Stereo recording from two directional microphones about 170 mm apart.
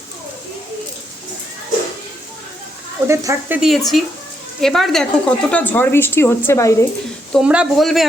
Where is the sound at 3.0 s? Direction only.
15° right (ahead or behind).